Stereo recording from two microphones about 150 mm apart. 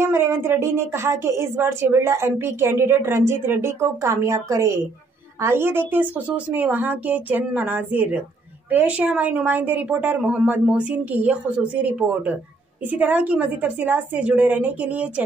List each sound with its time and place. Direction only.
0.0 s speech: 15° right (ahead or behind)